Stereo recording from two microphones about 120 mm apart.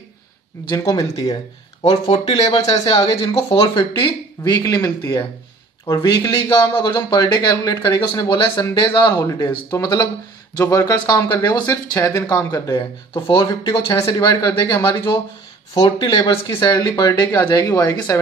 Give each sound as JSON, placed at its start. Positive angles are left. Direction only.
{"t": 0.7, "sound": "speech", "side_deg": 30}
{"t": 1.9, "sound": "speech", "side_deg": 55}
{"t": 2.7, "sound": "speech", "side_deg": 35}
{"t": 3.6, "sound": "speech", "side_deg": 40}
{"t": 9.1, "sound": "speech", "side_deg": 25}
{"t": 9.5, "sound": "speech", "side_deg": 40}
{"t": 11.7, "sound": "speech", "side_deg": 20}
{"t": 12.7, "sound": "speech", "side_deg": 45}
{"t": 13.9, "sound": "speech", "side_deg": 25}
{"t": 14.2, "sound": "speech", "side_deg": 35}